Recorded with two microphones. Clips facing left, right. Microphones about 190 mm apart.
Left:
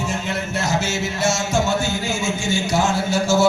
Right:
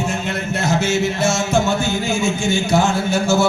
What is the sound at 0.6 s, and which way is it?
Music, 55° right (ahead or behind).